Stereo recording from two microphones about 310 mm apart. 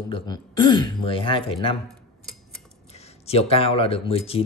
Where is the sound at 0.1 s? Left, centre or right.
Centre.